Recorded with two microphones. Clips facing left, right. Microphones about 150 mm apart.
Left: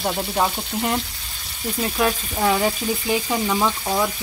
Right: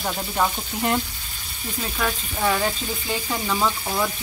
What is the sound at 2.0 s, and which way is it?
Frying, 15° left (ahead or behind).